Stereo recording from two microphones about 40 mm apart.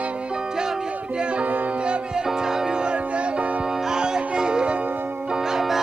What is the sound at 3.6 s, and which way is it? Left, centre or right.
Music, centre.